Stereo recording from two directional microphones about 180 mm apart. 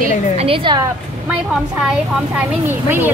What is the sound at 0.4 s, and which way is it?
Speech, 30° right (ahead or behind).